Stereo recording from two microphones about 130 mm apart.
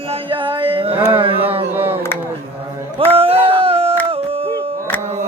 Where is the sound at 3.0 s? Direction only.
45° right (ahead or behind).